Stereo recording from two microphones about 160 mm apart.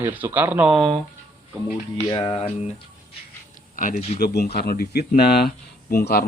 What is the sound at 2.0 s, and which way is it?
Speech, 25° left (ahead or behind).